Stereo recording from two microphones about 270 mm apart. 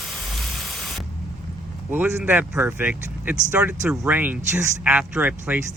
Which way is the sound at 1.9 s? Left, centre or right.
Centre.